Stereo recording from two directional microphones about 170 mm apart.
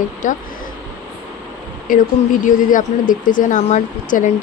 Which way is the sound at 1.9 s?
55° left (ahead or behind).